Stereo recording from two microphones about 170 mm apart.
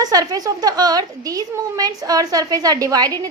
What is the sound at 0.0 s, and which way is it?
A woman's voice, 20° right (ahead or behind).